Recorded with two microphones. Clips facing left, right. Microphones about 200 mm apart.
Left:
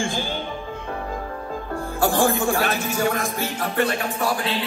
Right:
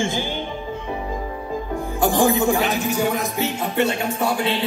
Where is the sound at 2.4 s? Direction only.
20° right (ahead or behind).